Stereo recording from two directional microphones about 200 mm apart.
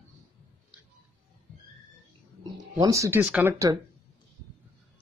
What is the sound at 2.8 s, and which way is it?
Speech, 15° right (ahead or behind).